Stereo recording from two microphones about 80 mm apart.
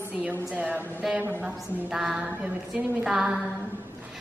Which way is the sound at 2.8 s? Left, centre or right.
Centre.